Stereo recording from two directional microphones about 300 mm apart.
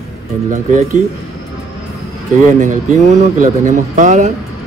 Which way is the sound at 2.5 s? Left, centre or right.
Right.